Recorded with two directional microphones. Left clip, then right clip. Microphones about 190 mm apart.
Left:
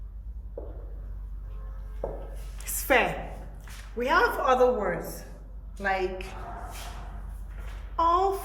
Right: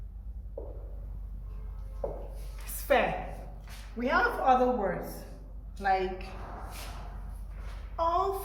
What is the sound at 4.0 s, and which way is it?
Speech, 60° left (ahead or behind).